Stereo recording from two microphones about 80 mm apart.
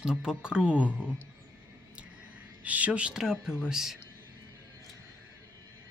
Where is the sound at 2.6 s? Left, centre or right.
Centre.